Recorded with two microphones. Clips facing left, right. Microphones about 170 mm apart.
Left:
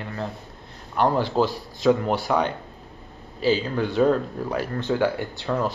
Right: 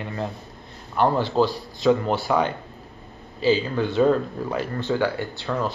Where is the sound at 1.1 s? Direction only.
10° left (ahead or behind).